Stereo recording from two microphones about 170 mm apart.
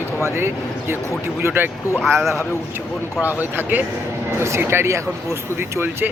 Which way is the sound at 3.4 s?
10° right (ahead or behind).